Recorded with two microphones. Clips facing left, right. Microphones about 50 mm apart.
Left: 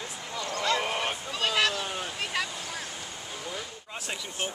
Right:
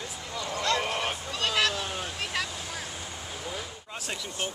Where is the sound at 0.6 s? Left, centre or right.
Centre.